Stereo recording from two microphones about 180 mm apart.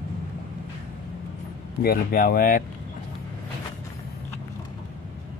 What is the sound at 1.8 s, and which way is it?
Speech, 55° left (ahead or behind).